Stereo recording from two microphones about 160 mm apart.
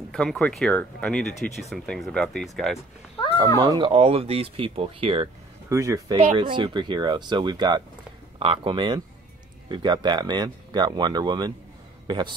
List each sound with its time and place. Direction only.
0.1 s speech: 5° left (ahead or behind)
3.6 s speech: 25° right (ahead or behind)
3.9 s speech: 35° right (ahead or behind)
5.7 s speech: 20° right (ahead or behind)
6.1 s speech: 35° right (ahead or behind)